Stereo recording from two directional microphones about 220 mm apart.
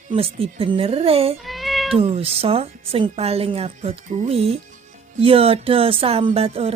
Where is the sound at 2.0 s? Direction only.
25° right (ahead or behind).